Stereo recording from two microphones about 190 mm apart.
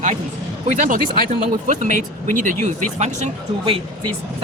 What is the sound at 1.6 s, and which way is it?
Speech, 40° right (ahead or behind).